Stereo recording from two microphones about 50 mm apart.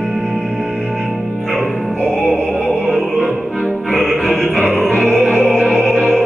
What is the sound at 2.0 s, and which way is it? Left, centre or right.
Music, left.